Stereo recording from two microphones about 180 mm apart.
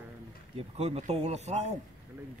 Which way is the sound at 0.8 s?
40° right (ahead or behind).